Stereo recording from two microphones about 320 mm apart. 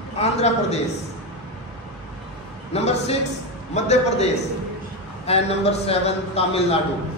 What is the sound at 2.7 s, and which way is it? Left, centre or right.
A woman's voice, centre.